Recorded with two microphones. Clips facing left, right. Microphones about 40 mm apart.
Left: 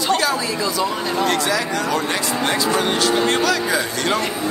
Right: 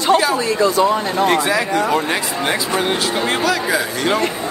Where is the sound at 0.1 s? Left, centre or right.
Centre.